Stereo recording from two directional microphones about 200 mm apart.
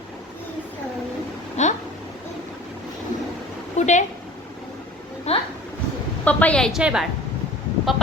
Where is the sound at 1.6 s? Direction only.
35° left (ahead or behind).